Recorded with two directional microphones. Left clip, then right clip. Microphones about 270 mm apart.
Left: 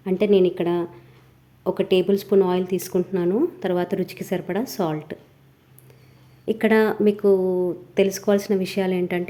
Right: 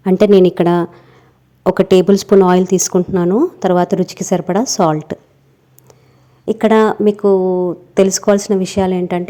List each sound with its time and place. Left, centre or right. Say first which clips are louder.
0.0 s a woman's voice: right 9 dB; right
6.4 s speech: right 7 dB; centre